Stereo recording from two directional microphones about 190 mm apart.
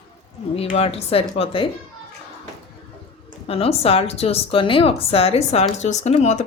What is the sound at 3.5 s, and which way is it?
Speech, 30° left (ahead or behind).